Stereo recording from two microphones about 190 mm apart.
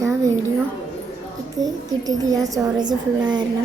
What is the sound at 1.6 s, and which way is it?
A woman's voice, 20° right (ahead or behind).